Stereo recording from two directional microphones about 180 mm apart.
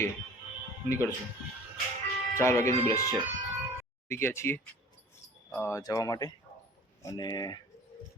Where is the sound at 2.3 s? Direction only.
15° left (ahead or behind).